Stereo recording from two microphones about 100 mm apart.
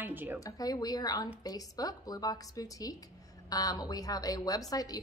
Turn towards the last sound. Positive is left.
turn(degrees=40)  # may be behind; listen again after turning